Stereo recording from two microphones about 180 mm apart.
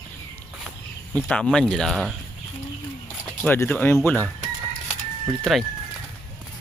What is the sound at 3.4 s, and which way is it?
Speech, 10° left (ahead or behind).